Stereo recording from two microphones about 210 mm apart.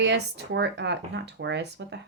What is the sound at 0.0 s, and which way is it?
Speech, 55° right (ahead or behind).